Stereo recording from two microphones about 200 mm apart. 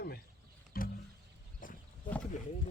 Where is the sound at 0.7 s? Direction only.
50° left (ahead or behind).